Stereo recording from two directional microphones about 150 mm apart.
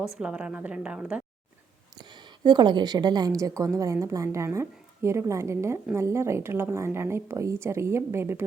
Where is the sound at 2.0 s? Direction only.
30° right (ahead or behind).